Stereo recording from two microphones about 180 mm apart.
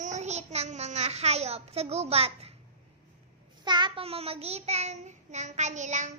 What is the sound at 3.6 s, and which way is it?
Child singing, 25° right (ahead or behind).